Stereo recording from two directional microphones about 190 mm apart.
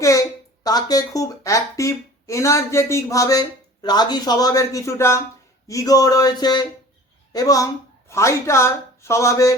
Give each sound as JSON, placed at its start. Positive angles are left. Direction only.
{"t": 0.0, "sound": "speech", "side_deg": 15}
{"t": 5.6, "sound": "a sound", "side_deg": 20}
{"t": 8.1, "sound": "speech", "side_deg": 15}